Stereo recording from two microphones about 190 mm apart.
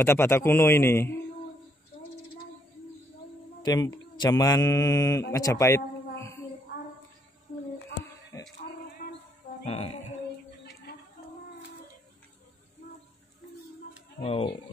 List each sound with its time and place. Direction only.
0.0 s mantra: 15° left (ahead or behind)
3.6 s mantra: 20° left (ahead or behind)
9.0 s a sound: 60° left (ahead or behind)
14.2 s speech: 30° left (ahead or behind)